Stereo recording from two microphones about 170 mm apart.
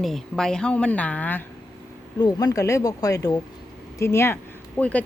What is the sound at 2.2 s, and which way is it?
Speech, 20° left (ahead or behind).